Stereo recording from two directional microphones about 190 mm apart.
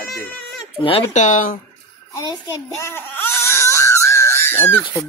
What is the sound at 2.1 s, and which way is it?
A child's voice, 15° left (ahead or behind).